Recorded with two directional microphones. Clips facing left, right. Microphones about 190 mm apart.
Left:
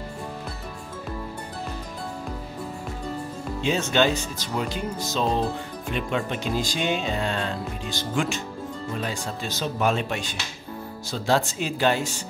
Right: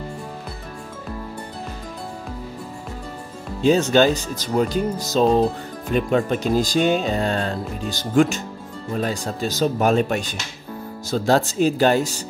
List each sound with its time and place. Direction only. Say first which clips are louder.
3.6 s speech: right 7 dB; 40° right (ahead or behind)